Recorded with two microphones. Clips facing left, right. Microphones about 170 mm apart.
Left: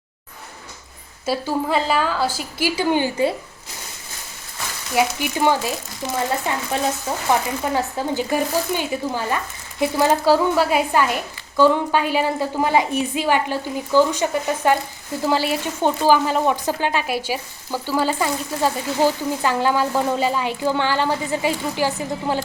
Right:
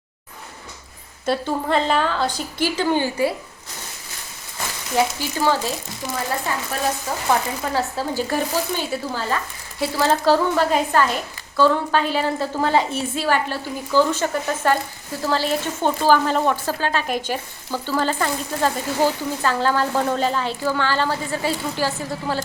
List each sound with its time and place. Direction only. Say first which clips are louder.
1.2 s speech: even; 5° left (ahead or behind)
4.9 s speech: left 1 dB; 15° left (ahead or behind)
7.1 s speech: left 2 dB; 25° left (ahead or behind)